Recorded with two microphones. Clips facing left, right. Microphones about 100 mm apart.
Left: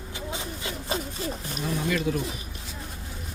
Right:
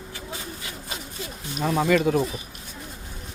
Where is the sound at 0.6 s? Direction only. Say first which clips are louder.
Left 6 dB; 30° left (ahead or behind).